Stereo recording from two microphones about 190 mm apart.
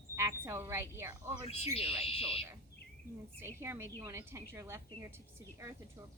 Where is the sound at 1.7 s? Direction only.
30° left (ahead or behind).